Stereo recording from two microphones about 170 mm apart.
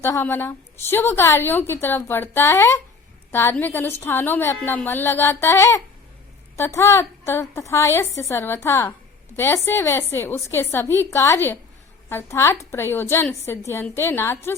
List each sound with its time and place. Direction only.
0.0 s a woman's voice: 15° left (ahead or behind)